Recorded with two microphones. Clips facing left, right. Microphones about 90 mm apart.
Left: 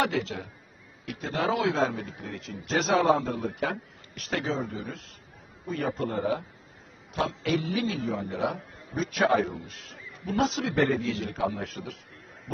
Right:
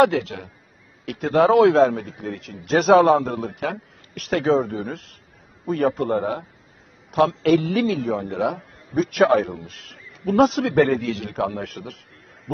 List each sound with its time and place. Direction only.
0.0 s a man's voice: 65° right (ahead or behind)